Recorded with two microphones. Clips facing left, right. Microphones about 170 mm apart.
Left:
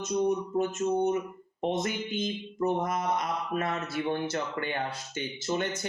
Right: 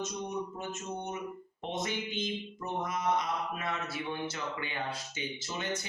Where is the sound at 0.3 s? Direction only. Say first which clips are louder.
Left 9 dB; 50° left (ahead or behind).